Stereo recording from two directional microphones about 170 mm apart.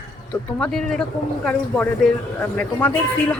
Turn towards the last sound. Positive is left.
turn(degrees=10)  # may be behind; listen again after turning